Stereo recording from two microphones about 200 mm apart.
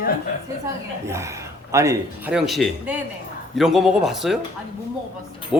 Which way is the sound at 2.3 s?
Centre (ahead or behind).